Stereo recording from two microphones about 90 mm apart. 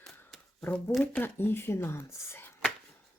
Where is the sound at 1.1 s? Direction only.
25° left (ahead or behind).